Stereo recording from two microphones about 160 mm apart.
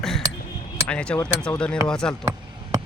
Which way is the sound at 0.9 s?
10° left (ahead or behind).